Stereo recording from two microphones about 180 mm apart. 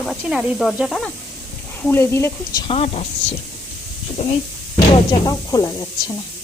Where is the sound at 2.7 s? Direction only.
35° left (ahead or behind).